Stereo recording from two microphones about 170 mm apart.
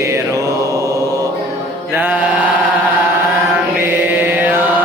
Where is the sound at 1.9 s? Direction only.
10° right (ahead or behind).